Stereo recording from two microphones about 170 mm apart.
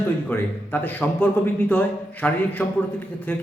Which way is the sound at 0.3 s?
10° left (ahead or behind).